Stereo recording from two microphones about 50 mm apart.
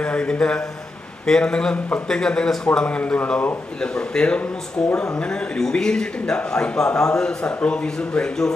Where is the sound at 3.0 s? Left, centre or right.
Left.